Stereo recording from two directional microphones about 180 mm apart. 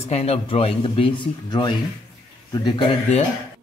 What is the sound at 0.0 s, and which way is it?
Speech, 35° left (ahead or behind).